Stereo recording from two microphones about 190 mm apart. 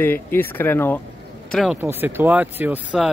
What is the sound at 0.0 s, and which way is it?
Speech, 10° left (ahead or behind).